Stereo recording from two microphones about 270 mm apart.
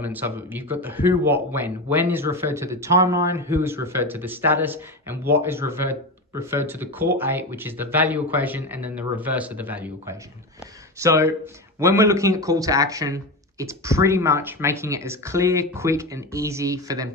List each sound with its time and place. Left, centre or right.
0.0 s speech: centre